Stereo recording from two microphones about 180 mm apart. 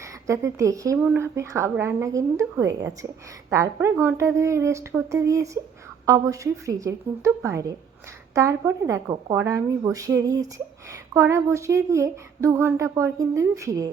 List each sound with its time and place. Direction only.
0.0 s speech: 15° right (ahead or behind)